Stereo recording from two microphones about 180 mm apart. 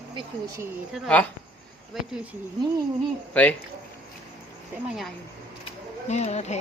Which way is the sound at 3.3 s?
10° left (ahead or behind).